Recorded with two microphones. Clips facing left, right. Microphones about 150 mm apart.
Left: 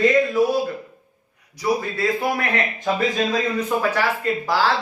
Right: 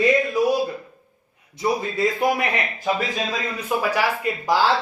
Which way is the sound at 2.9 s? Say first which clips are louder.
Left 4 dB; centre (ahead or behind).